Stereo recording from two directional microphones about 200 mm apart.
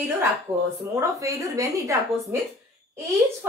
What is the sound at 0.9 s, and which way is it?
Speech, 15° right (ahead or behind).